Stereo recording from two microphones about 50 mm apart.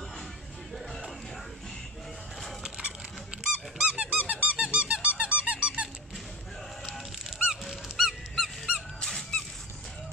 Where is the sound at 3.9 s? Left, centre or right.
Right.